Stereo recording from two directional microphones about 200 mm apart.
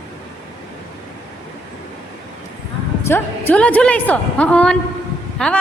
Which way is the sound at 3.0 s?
10° left (ahead or behind).